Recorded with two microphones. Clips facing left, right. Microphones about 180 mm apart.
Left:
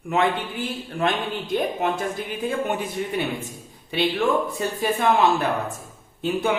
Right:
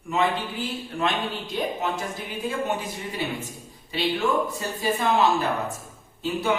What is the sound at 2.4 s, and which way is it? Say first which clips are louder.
Speech: left 2 dB; 55° left (ahead or behind).